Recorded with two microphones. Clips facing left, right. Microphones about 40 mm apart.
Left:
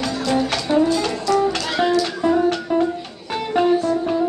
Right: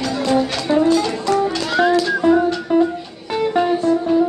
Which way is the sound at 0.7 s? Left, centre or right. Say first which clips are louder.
Right 1 dB; right.